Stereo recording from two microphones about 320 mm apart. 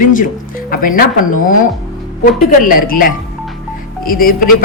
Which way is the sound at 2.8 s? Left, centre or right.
Left.